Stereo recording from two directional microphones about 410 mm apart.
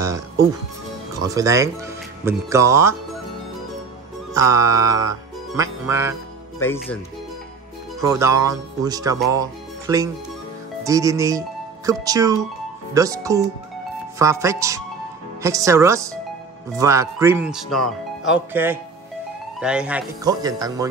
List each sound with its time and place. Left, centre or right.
1.2 s speech: centre
4.3 s music: centre
6.6 s speech: centre
8.0 s speech: centre